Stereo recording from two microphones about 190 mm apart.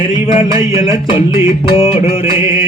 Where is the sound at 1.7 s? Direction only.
30° left (ahead or behind).